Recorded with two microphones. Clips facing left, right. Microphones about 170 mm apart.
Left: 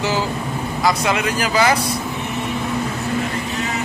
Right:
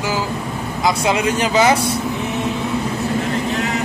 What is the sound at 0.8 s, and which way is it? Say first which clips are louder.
Speech: right 2 dB; 25° right (ahead or behind).